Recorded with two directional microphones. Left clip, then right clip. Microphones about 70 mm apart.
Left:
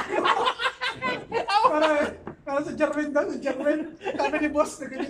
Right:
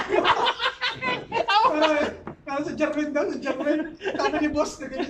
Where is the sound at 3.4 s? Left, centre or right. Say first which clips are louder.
Even; left.